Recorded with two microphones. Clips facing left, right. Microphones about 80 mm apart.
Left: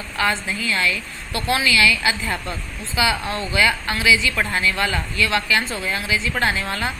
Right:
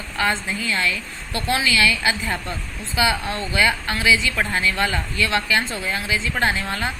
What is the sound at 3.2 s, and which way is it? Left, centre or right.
Speech, left.